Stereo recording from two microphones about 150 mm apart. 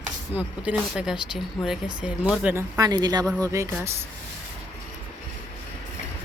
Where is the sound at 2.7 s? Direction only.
25° right (ahead or behind).